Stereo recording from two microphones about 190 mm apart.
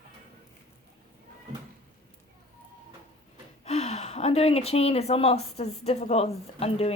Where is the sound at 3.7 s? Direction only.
35° left (ahead or behind).